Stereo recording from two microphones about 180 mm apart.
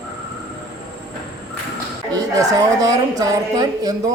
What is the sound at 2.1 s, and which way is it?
A woman's voice, 20° right (ahead or behind).